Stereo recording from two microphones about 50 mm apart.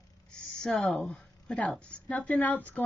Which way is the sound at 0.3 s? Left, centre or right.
Centre.